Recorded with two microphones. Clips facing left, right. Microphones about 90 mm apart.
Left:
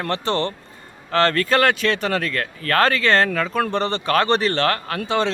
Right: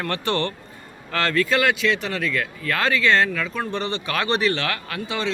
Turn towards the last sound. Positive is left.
turn(degrees=40)  # may be behind; listen again after turning